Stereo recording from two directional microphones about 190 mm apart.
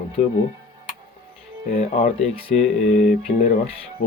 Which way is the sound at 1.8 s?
35° left (ahead or behind).